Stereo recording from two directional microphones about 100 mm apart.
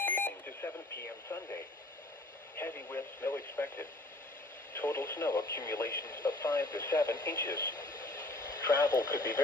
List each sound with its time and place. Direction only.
0.0 s alarm clock: 20° left (ahead or behind)
2.6 s radio: 20° left (ahead or behind)
5.3 s speech: 40° left (ahead or behind)
7.9 s radio: 35° left (ahead or behind)